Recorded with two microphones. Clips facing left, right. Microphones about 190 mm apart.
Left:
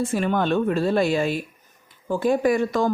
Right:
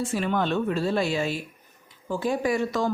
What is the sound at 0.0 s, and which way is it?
Speech, 50° left (ahead or behind).